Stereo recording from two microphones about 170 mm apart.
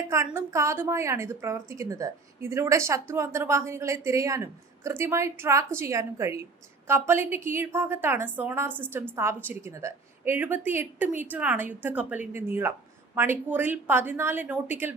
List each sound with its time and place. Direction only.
0.3 s speech: 15° right (ahead or behind)